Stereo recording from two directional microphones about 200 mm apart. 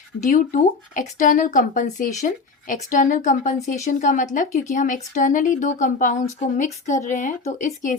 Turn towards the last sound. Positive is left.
turn(degrees=40)  # may be behind; listen again after turning